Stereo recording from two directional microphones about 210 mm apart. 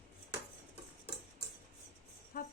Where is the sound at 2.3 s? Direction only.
45° left (ahead or behind).